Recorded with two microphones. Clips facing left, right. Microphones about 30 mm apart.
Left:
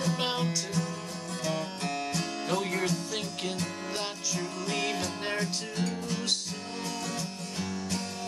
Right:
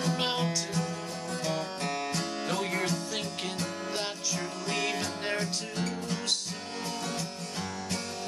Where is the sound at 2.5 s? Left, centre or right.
Centre.